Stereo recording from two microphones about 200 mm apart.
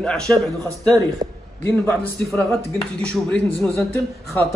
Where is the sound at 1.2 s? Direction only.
25° right (ahead or behind).